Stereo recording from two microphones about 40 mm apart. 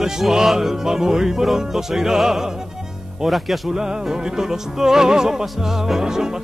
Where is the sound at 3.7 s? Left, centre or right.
Centre.